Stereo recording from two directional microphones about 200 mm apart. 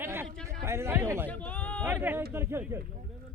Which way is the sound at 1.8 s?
10° right (ahead or behind).